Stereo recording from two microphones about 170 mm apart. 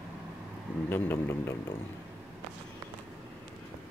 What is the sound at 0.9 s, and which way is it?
Speech, 15° left (ahead or behind).